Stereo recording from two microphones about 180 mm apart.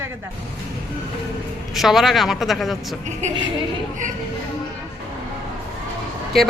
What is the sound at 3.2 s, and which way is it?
Speech, 40° right (ahead or behind).